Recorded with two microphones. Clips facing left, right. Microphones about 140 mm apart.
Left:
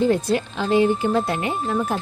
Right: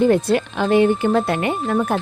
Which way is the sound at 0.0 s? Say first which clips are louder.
Right 4 dB; 60° right (ahead or behind).